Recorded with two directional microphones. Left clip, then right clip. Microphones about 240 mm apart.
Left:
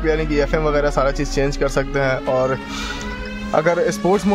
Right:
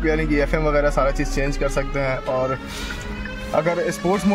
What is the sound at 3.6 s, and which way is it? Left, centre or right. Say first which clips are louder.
Speech: left 4 dB; centre.